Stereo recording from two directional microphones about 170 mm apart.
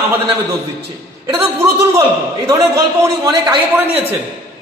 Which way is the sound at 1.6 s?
20° right (ahead or behind).